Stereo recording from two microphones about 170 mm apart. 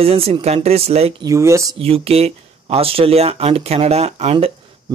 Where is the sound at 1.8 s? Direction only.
35° right (ahead or behind).